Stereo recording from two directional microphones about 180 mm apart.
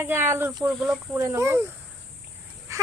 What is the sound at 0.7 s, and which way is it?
Speech, centre (ahead or behind).